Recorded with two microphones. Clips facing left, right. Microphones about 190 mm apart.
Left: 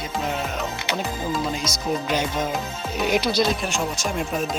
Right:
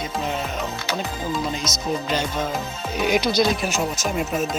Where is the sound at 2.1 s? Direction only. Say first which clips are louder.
Left 1 dB; 10° left (ahead or behind).